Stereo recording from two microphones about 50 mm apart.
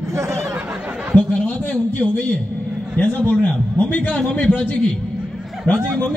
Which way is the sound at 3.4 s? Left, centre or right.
Left.